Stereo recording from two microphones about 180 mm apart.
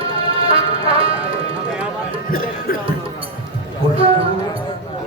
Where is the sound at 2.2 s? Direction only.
55° left (ahead or behind).